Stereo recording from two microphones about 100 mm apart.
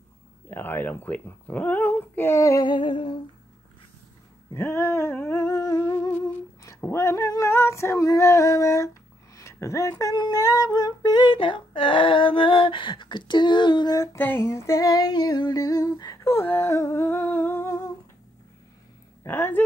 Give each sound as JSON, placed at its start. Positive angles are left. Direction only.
{"t": 0.5, "sound": "speech", "side_deg": 20}
{"t": 2.3, "sound": "female singing", "side_deg": 30}
{"t": 2.6, "sound": "a sound", "side_deg": 55}
{"t": 4.6, "sound": "humming", "side_deg": 25}
{"t": 6.9, "sound": "female singing", "side_deg": 30}
{"t": 10.1, "sound": "female singing", "side_deg": 45}
{"t": 11.3, "sound": "a sound", "side_deg": 60}
{"t": 13.9, "sound": "female singing", "side_deg": 25}
{"t": 16.4, "sound": "humming", "side_deg": 25}
{"t": 19.2, "sound": "speech", "side_deg": 20}